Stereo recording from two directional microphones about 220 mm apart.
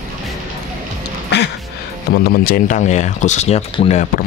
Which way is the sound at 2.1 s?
45° left (ahead or behind).